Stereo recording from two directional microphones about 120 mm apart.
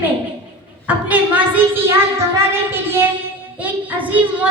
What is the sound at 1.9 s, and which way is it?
Child singing, 20° right (ahead or behind).